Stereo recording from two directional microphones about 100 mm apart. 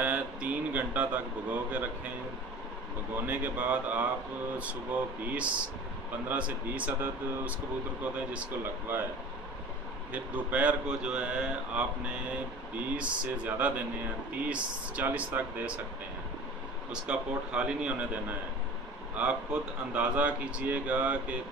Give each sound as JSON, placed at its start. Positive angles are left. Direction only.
{"t": 0.0, "sound": "a sound", "side_deg": -15}
{"t": 3.2, "sound": "speech", "side_deg": -20}
{"t": 5.3, "sound": "speech", "side_deg": -15}
{"t": 10.1, "sound": "speech", "side_deg": -15}
{"t": 12.9, "sound": "speech", "side_deg": -10}
{"t": 16.9, "sound": "speech", "side_deg": -10}
{"t": 19.1, "sound": "speech", "side_deg": -15}